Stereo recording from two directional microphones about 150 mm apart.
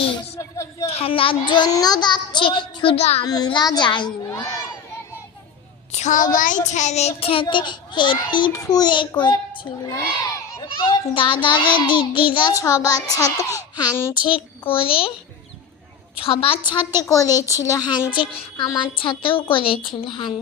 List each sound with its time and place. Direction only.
0.0 s a sound: 35° left (ahead or behind)
0.3 s speech: 20° left (ahead or behind)
0.9 s a child's voice: 40° left (ahead or behind)
3.2 s a child's voice: 25° left (ahead or behind)
5.9 s a woman's voice: 50° left (ahead or behind)
6.7 s child singing: 50° left (ahead or behind)
7.4 s a child's voice: 30° left (ahead or behind)
14.3 s a child's voice: 35° left (ahead or behind)
16.2 s a child's voice: 40° left (ahead or behind)
17.0 s a child's voice: 20° left (ahead or behind)
17.2 s speech: 15° right (ahead or behind)
17.7 s a child's voice: 25° left (ahead or behind)